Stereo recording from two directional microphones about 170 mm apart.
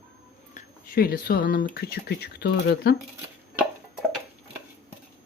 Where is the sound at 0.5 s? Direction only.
60° left (ahead or behind).